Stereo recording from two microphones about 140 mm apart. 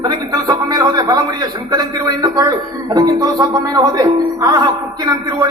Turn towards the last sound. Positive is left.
turn(degrees=-30)  # may be behind; listen again after turning